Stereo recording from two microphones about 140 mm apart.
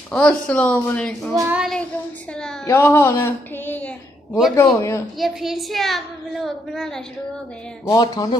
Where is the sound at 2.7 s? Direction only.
20° left (ahead or behind).